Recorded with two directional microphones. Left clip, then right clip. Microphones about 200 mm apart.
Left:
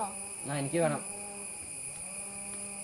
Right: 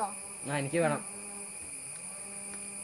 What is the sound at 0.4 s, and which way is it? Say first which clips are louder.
Speech: right 1 dB; 55° right (ahead or behind).